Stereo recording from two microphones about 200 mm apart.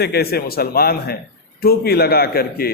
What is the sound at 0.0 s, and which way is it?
A man's voice, 50° left (ahead or behind).